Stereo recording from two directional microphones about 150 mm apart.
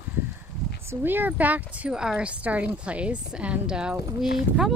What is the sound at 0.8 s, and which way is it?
Speech, 15° right (ahead or behind).